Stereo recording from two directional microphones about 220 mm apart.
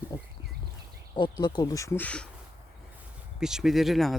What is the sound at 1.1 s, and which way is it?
Speech, 20° left (ahead or behind).